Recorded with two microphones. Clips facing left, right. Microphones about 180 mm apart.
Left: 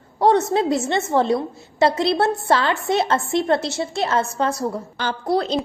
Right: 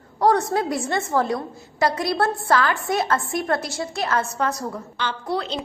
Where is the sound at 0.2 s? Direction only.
25° left (ahead or behind).